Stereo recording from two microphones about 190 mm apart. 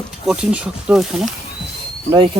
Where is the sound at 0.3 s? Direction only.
5° right (ahead or behind).